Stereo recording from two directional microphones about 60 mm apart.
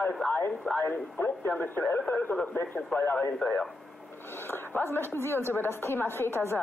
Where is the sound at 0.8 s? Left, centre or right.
Left.